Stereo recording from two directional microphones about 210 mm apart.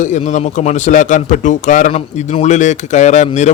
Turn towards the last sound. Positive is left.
turn(degrees=35)  # may be behind; listen again after turning